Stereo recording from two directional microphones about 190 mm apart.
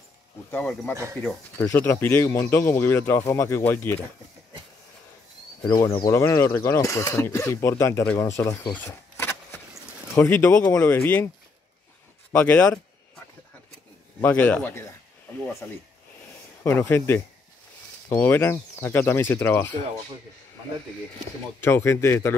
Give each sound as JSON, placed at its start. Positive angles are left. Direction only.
{"t": 0.5, "sound": "speech", "side_deg": 10}
{"t": 0.9, "sound": "speech", "side_deg": -15}
{"t": 1.2, "sound": "speech", "side_deg": 10}
{"t": 5.7, "sound": "speech", "side_deg": 25}
{"t": 12.3, "sound": "speech", "side_deg": 10}
{"t": 14.2, "sound": "speech", "side_deg": 10}
{"t": 21.5, "sound": "speech", "side_deg": 10}